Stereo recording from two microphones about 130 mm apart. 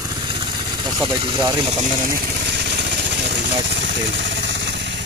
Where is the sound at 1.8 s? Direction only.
90° right.